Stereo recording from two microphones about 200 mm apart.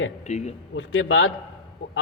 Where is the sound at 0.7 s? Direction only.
75° left (ahead or behind).